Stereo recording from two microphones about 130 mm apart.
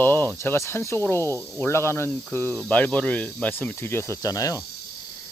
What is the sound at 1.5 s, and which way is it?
Speech, 20° left (ahead or behind).